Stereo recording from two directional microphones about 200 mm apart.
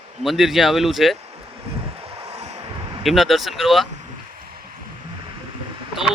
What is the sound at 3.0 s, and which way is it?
Speech, centre (ahead or behind).